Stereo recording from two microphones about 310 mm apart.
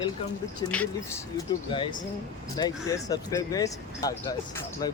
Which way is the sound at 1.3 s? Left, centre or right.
Centre.